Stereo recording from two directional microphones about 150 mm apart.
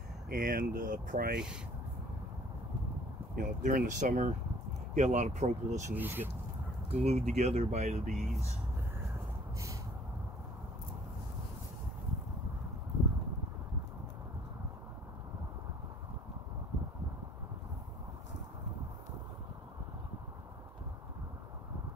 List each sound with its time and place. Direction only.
0.3 s speech: 70° right (ahead or behind)
3.3 s speech: 60° right (ahead or behind)
5.9 s speech: 15° right (ahead or behind)
6.9 s speech: 45° right (ahead or behind)
8.1 s speech: centre (ahead or behind)